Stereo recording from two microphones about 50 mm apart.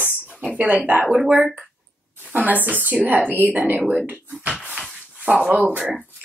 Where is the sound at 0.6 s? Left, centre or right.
Right.